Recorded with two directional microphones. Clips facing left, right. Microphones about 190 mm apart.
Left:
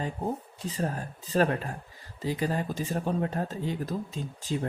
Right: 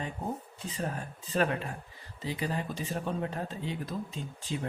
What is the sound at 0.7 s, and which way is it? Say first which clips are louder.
Speech: left 4 dB; 40° left (ahead or behind).